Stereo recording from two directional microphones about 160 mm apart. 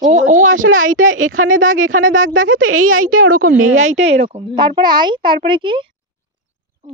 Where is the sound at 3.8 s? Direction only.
45° right (ahead or behind); by 5.8 s 30° right (ahead or behind).